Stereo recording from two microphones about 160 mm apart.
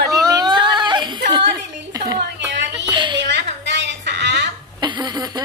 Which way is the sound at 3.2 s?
90° right.